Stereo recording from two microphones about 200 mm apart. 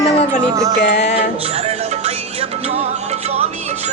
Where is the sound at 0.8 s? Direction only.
55° left (ahead or behind).